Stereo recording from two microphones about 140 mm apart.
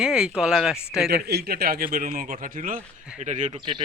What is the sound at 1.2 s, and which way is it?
Speech, 90° right.